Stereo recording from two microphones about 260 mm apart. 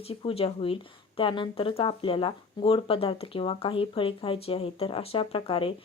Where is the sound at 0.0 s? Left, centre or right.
Left.